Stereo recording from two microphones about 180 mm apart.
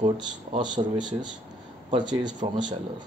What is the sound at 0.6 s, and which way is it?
Speech, 25° right (ahead or behind).